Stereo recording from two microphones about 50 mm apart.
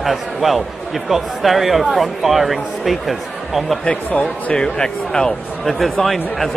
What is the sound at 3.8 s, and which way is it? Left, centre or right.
Speech, left.